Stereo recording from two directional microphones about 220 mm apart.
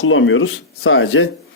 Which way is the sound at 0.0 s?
60° left (ahead or behind).